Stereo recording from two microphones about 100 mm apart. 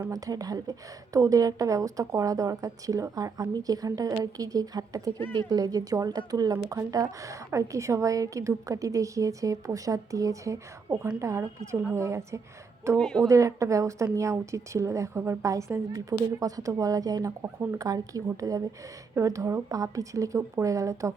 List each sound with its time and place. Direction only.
0.1 s speech: 35° right (ahead or behind)
5.1 s speech: 20° left (ahead or behind)
5.5 s a woman's voice: 40° right (ahead or behind)
13.0 s speech: 5° left (ahead or behind)
13.2 s speech: 30° right (ahead or behind)
17.4 s a woman's voice: 25° right (ahead or behind)
17.7 s speech: 35° right (ahead or behind)